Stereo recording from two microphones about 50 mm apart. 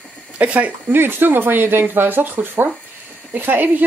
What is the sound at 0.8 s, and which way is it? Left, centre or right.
Speech, right.